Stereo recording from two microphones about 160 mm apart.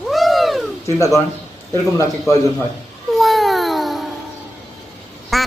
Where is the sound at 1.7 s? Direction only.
20° left (ahead or behind).